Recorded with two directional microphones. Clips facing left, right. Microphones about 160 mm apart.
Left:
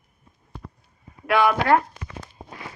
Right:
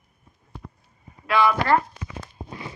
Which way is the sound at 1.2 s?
60° left (ahead or behind).